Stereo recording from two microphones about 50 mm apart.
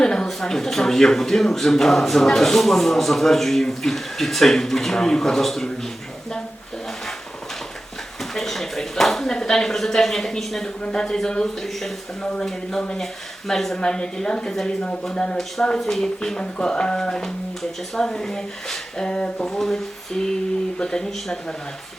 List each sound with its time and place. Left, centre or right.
0.0 s a sound: centre
0.3 s speech: centre
8.4 s speech: centre
12.2 s speech: centre
13.5 s speech: centre
19.5 s speech: centre